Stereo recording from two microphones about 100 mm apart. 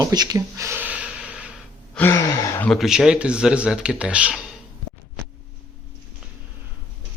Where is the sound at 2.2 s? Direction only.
30° left (ahead or behind).